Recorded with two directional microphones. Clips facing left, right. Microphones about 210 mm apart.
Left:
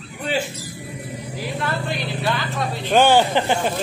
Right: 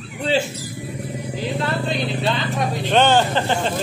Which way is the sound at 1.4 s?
25° right (ahead or behind).